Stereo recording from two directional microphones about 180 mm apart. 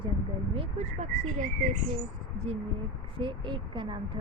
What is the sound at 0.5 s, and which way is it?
Speech, 35° right (ahead or behind).